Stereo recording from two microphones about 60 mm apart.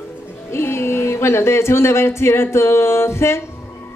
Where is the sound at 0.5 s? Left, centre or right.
Left.